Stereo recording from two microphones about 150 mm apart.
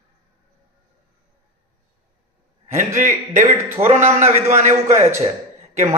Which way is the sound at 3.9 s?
50° right (ahead or behind).